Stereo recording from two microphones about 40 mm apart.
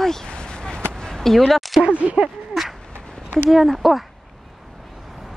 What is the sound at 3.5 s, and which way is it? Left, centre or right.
Speech, centre.